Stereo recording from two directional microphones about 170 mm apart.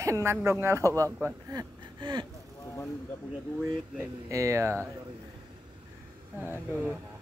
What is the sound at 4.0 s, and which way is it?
Speech, 20° right (ahead or behind).